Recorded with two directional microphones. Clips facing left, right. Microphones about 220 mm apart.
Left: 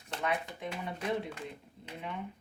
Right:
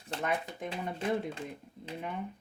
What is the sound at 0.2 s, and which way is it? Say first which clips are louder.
Speech: even; 45° right (ahead or behind).